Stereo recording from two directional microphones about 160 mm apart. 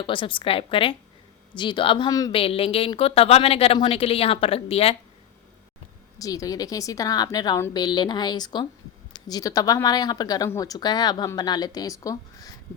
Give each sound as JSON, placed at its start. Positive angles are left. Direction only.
{"t": 0.0, "sound": "a woman's voice", "side_deg": 30}
{"t": 2.3, "sound": "a woman's voice", "side_deg": 35}
{"t": 6.1, "sound": "a woman's voice", "side_deg": 20}